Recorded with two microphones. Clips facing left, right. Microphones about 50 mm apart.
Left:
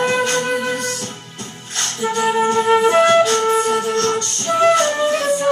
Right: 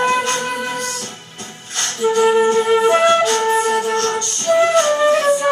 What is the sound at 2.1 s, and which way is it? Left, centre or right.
Flute, centre.